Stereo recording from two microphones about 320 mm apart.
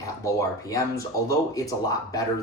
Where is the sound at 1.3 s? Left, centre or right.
Centre.